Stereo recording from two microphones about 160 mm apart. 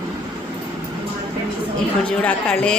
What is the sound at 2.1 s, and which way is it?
Speech, 5° left (ahead or behind).